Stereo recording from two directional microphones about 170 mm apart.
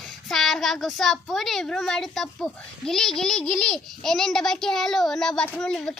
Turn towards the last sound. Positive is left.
turn(degrees=5)  # may be behind; listen again after turning